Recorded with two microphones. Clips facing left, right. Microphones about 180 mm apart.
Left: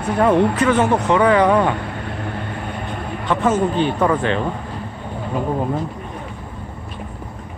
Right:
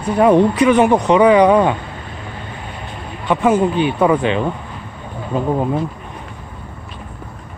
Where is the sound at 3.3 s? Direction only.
10° right (ahead or behind).